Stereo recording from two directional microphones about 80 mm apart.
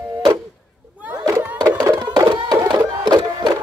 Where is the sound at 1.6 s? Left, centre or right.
Right.